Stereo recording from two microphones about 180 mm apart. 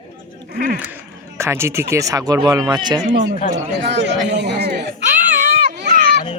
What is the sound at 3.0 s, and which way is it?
Speech, 50° right (ahead or behind).